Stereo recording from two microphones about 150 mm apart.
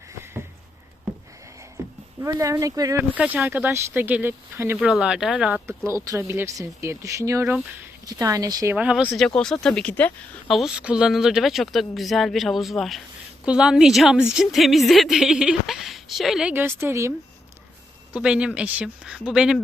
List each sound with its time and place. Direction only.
2.2 s speech: 20° right (ahead or behind)
3.2 s speech: 10° right (ahead or behind)
4.9 s a woman's voice: 5° right (ahead or behind)
5.6 s speech: 20° right (ahead or behind)
8.7 s speech: 10° right (ahead or behind)
9.1 s a woman's voice: 5° left (ahead or behind); by 17.1 s 15° right (ahead or behind)
18.1 s speech: 5° right (ahead or behind)